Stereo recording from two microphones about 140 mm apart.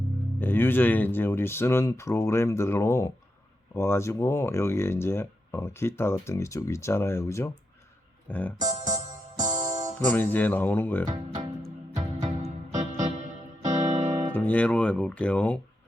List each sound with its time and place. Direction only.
0.3 s speech: 15° left (ahead or behind)
10.1 s speech: 10° left (ahead or behind)
11.0 s speech: 30° right (ahead or behind)
11.9 s music: 25° right (ahead or behind)
12.8 s electric piano: 50° right (ahead or behind)
13.7 s music: 55° right (ahead or behind)
14.3 s speech: 10° left (ahead or behind)